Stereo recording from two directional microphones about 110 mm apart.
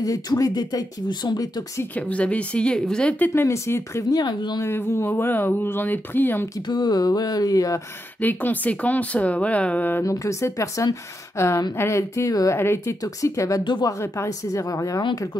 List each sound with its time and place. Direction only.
0.0 s speech: 30° left (ahead or behind)
2.0 s speech: 10° left (ahead or behind)
3.3 s speech: 25° left (ahead or behind)
4.2 s speech: 40° left (ahead or behind)
4.6 s speech: 20° left (ahead or behind)
6.7 s speech: 40° left (ahead or behind)
8.2 s speech: 15° left (ahead or behind)
10.0 s speech: 30° left (ahead or behind)
13.7 s speech: 40° left (ahead or behind)
14.1 s speech: 30° left (ahead or behind)